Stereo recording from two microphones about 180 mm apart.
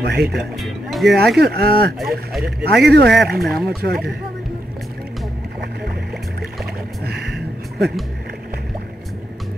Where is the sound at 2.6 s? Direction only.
65° right (ahead or behind).